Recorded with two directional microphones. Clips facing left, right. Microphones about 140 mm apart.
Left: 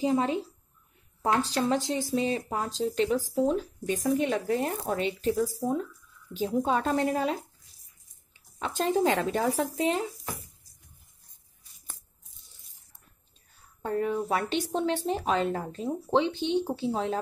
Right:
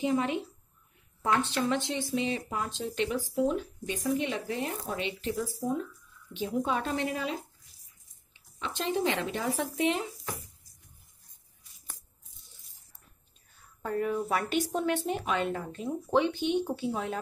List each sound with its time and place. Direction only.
0.0 s speech: 30° left (ahead or behind)
13.8 s speech: 30° left (ahead or behind)
16.1 s speech: 25° left (ahead or behind)